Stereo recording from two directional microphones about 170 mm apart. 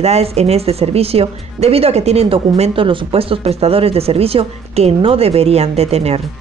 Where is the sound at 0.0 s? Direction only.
40° right (ahead or behind).